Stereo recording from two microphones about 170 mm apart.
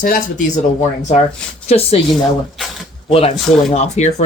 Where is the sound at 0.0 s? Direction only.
50° left (ahead or behind).